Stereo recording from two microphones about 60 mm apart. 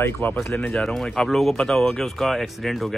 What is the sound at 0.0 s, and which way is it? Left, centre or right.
Speech, left.